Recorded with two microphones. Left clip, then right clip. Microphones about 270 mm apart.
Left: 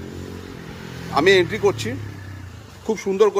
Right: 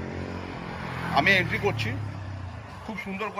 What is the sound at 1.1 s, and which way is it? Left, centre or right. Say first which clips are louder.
Speech: left 6 dB; centre.